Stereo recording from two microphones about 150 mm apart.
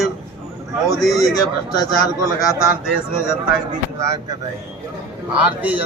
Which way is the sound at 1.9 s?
20° left (ahead or behind).